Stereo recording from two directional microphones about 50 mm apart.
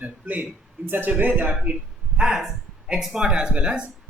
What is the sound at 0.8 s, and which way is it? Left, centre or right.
Speech, right.